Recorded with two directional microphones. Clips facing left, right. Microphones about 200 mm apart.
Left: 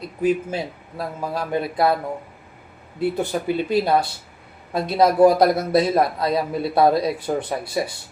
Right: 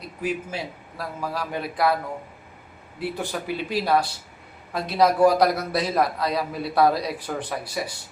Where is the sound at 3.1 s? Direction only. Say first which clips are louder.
Left 6 dB; 20° left (ahead or behind).